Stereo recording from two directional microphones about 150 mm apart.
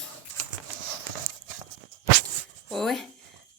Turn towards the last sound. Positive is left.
turn(degrees=0)  # may be behind; listen again after turning